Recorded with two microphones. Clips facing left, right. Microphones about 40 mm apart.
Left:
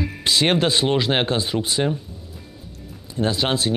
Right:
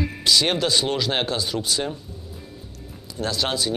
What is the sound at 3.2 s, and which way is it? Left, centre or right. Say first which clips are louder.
Speech: left 3 dB; left.